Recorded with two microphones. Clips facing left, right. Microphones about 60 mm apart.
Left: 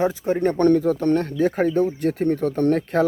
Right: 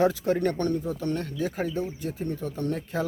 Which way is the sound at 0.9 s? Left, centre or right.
Left.